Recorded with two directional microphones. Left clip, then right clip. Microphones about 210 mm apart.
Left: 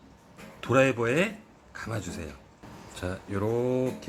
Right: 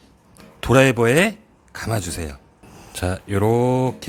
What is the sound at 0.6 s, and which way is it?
Speech, 55° right (ahead or behind).